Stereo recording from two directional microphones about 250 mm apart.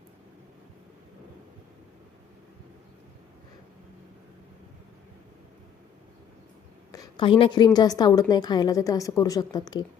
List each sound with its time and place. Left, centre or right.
6.9 s a woman's voice: centre